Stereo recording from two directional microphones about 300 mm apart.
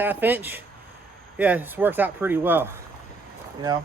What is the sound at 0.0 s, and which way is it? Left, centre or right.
Speech, centre.